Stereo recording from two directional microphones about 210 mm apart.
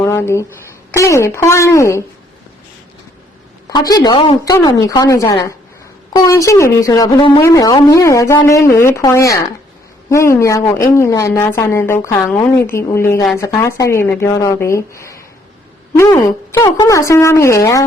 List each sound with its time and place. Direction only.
0.0 s a woman's voice: 10° left (ahead or behind)
3.7 s a woman's voice: 20° left (ahead or behind)